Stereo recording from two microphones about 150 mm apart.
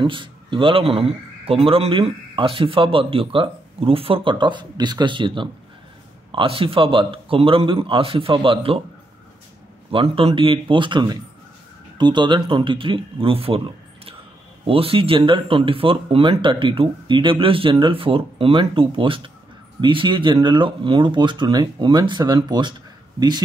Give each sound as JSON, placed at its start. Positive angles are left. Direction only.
{"t": 0.0, "sound": "speech", "side_deg": -35}
{"t": 9.8, "sound": "speech", "side_deg": -35}
{"t": 14.7, "sound": "speech", "side_deg": -35}